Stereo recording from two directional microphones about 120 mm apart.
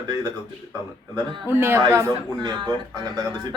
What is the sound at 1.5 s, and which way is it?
A woman's voice, 20° right (ahead or behind).